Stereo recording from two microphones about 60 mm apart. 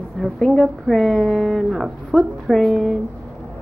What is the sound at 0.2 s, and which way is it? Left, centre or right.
A woman's voice, centre.